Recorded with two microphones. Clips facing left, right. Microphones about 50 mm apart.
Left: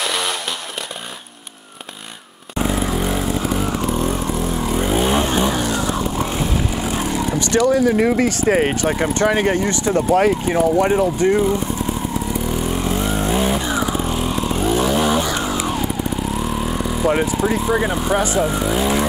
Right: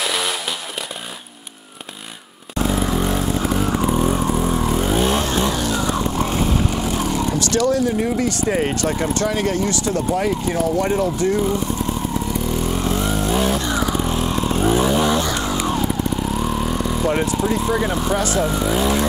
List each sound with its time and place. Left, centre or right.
0.0 s chainsaw: centre
2.7 s vehicle: centre
4.6 s vehicle: centre
5.2 s vehicle: centre
7.4 s speech: centre
7.8 s speech: left
8.3 s speech: left
8.7 s speech: centre
9.0 s speech: left
12.4 s vehicle: centre
15.0 s vehicle: centre
18.1 s speech: centre
18.4 s speech: centre